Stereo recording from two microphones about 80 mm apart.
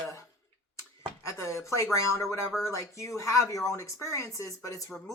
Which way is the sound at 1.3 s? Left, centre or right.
Left.